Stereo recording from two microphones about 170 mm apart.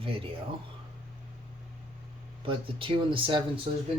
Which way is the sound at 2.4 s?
30° right (ahead or behind).